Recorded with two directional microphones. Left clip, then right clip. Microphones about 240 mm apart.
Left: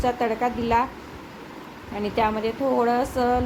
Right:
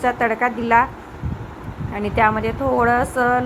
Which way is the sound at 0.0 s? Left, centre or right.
Centre.